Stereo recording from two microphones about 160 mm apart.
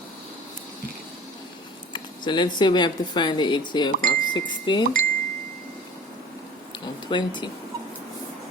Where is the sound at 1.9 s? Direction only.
30° left (ahead or behind).